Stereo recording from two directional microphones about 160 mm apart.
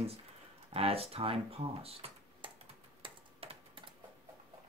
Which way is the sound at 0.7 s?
40° right (ahead or behind).